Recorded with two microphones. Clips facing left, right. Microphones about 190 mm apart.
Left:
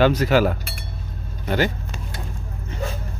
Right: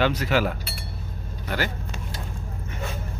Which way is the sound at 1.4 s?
20° left (ahead or behind).